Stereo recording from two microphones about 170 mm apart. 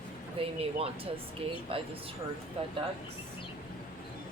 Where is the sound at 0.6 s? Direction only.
35° right (ahead or behind).